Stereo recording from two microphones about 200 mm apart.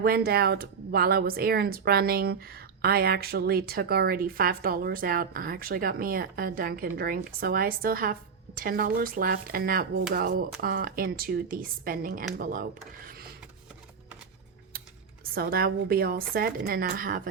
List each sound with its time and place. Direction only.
0.0 s speech: 50° right (ahead or behind)
13.1 s printer: 50° right (ahead or behind)
14.7 s typing: 50° right (ahead or behind)
15.2 s speech: 50° right (ahead or behind)